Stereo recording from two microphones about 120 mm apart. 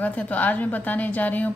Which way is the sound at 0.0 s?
10° left (ahead or behind).